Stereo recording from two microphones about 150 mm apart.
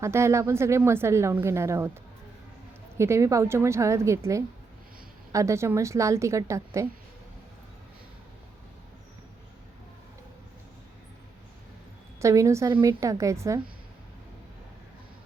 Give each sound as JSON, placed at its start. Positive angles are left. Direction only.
{"t": 0.0, "sound": "a woman's voice", "side_deg": -20}
{"t": 3.0, "sound": "a woman's voice", "side_deg": -20}
{"t": 12.2, "sound": "a woman's voice", "side_deg": -20}